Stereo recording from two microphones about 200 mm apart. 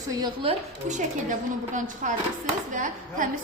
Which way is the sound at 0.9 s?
40° right (ahead or behind).